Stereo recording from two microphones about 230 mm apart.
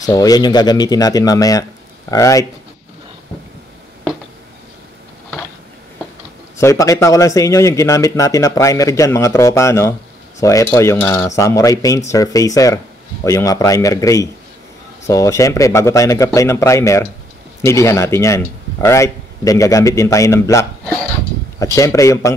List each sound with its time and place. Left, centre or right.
0.0 s cutlery: centre
6.6 s cutlery: centre